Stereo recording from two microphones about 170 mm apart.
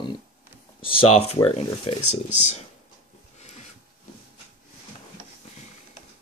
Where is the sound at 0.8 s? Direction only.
35° left (ahead or behind).